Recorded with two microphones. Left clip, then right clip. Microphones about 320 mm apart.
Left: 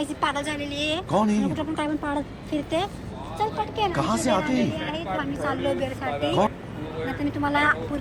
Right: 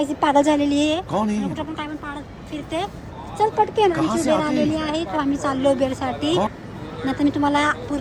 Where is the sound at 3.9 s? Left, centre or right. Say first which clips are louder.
Right 4 dB; centre.